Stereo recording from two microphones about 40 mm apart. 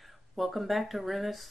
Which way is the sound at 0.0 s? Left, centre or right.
Centre.